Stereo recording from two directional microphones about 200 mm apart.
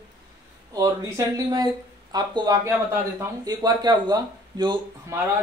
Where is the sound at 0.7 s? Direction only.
20° right (ahead or behind).